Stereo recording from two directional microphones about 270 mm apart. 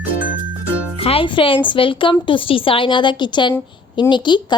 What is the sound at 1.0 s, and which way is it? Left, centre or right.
Speech, left.